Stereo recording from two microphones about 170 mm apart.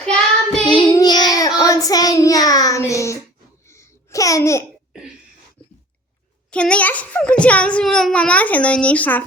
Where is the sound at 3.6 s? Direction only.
15° left (ahead or behind).